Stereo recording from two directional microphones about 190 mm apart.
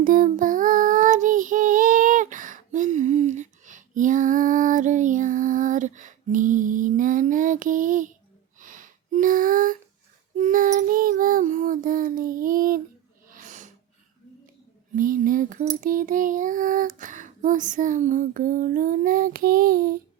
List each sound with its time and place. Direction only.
0.0 s child singing: 45° right (ahead or behind)
8.6 s a sound: 45° right (ahead or behind)
10.3 s child singing: 45° right (ahead or behind)
13.3 s snort: 40° right (ahead or behind)
14.9 s child singing: 45° right (ahead or behind)